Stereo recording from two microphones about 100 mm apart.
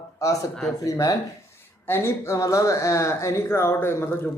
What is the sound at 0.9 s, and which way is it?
Speech, 35° left (ahead or behind).